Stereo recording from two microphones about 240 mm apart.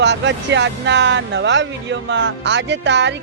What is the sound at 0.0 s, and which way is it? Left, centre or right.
Speech, right.